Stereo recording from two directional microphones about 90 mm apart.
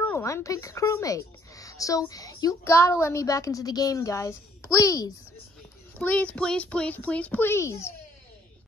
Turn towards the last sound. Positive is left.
turn(degrees=30)  # may be behind; listen again after turning